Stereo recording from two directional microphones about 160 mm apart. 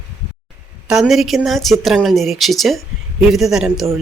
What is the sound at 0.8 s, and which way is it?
Speech, 5° right (ahead or behind).